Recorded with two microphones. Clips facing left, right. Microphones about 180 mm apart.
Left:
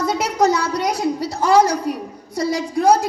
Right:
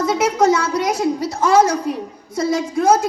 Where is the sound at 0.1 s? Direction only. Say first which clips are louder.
Right 3 dB; 50° right (ahead or behind).